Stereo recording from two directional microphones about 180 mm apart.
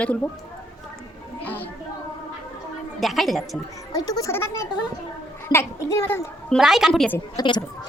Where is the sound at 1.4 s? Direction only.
10° left (ahead or behind).